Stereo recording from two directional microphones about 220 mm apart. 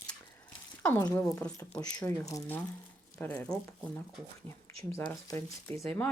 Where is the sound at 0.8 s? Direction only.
10° left (ahead or behind).